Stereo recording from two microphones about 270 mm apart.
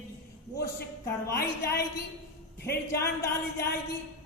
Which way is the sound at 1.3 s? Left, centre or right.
Left.